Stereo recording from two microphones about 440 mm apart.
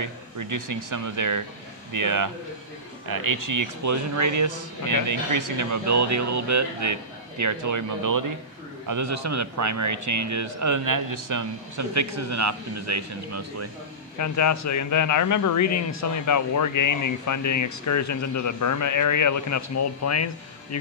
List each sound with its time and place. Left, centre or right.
0.0 s speech: right
14.1 s speech: left